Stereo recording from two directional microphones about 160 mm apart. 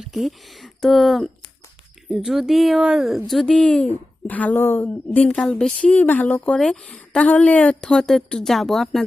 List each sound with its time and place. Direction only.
0.0 s speech: centre (ahead or behind)